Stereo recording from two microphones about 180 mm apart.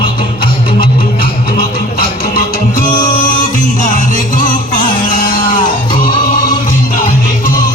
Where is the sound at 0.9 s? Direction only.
55° left (ahead or behind).